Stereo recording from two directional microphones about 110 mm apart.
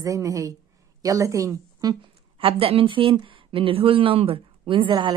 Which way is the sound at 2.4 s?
55° right (ahead or behind).